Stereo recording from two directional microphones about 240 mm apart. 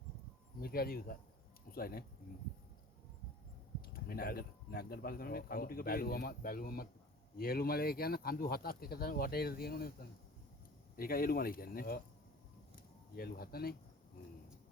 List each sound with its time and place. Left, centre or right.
0.6 s speech: left
3.8 s speech: left
13.1 s speech: left